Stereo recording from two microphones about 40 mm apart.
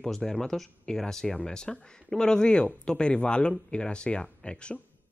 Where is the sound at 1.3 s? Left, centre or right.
Left.